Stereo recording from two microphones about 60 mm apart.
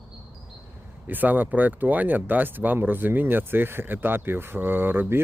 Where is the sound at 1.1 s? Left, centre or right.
Right.